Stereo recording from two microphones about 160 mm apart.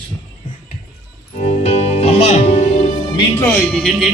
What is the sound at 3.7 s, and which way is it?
Speech, centre (ahead or behind).